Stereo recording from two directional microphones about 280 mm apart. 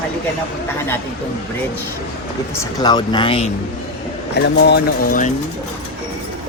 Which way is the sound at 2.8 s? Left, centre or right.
Centre.